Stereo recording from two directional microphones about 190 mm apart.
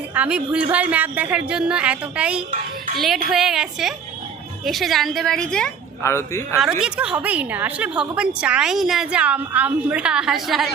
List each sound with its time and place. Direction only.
0.1 s a woman's voice: 5° right (ahead or behind)
6.0 s speech: 15° left (ahead or behind)
6.6 s a woman's voice: 5° right (ahead or behind)